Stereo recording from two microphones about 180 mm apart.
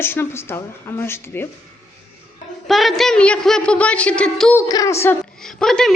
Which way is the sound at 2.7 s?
Centre (ahead or behind).